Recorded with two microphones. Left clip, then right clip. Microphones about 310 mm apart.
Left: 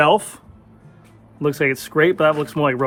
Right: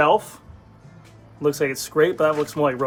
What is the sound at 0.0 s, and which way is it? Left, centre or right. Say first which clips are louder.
Speech: left 2 dB; left.